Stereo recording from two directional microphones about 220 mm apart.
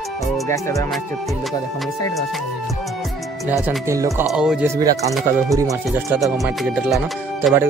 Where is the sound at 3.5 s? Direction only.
10° right (ahead or behind).